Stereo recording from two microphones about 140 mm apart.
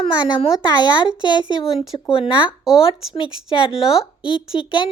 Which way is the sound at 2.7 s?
5° right (ahead or behind).